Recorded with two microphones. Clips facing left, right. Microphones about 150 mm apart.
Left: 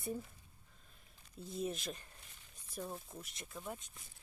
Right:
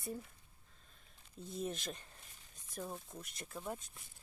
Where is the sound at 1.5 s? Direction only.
Centre (ahead or behind).